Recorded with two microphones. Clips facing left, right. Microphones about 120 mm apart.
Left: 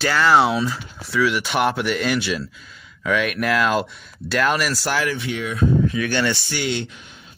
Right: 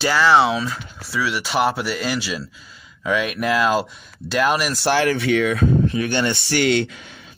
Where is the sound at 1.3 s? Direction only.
35° right (ahead or behind).